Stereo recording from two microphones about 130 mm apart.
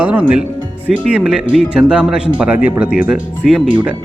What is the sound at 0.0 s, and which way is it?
Speech, 10° right (ahead or behind).